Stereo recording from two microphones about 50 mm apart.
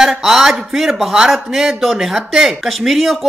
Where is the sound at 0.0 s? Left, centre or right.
Centre.